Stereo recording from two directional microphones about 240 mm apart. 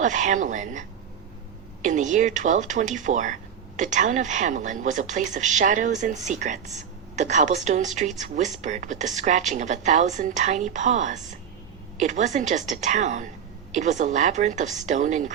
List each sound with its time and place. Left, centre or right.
0.0 s speech: right